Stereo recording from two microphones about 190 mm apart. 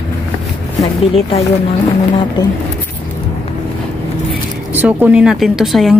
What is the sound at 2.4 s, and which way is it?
Speech, 25° left (ahead or behind).